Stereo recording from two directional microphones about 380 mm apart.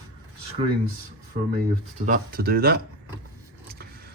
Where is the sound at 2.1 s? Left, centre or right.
Right.